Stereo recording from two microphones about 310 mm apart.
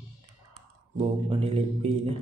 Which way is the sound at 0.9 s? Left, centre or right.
Centre.